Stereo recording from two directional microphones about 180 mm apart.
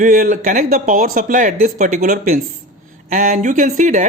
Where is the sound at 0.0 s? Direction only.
45° right (ahead or behind).